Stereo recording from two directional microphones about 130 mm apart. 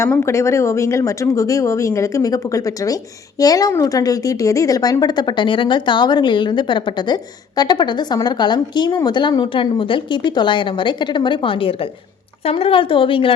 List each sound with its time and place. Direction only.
0.0 s speech: 20° left (ahead or behind); by 13.3 s 40° left (ahead or behind)